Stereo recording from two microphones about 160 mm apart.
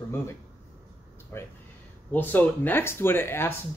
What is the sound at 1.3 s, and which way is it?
Speech, 15° left (ahead or behind).